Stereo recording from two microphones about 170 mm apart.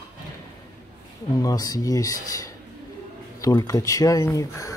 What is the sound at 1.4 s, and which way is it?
Speech, 20° left (ahead or behind).